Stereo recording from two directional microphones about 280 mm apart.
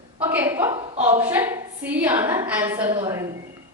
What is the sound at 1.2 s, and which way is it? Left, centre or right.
A woman's voice, centre.